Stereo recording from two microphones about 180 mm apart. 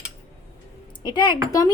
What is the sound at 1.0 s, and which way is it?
Speech, 25° left (ahead or behind).